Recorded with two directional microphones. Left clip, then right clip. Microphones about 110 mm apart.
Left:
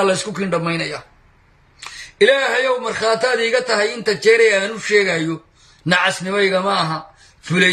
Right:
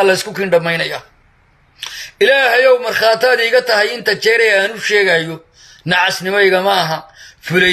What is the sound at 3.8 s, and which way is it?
A man's voice, 25° right (ahead or behind).